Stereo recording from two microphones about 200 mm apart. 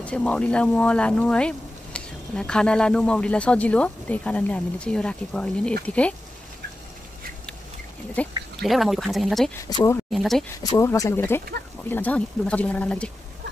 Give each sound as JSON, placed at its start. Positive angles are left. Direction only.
{"t": 0.0, "sound": "speech", "side_deg": 5}
{"t": 8.2, "sound": "speech", "side_deg": 5}
{"t": 9.7, "sound": "speech", "side_deg": 20}
{"t": 10.1, "sound": "speech", "side_deg": 0}
{"t": 10.6, "sound": "speech", "side_deg": 15}